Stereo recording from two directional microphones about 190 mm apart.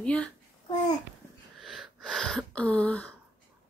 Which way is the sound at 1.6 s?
Centre (ahead or behind).